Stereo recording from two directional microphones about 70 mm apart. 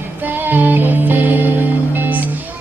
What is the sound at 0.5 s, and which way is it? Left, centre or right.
Music, right.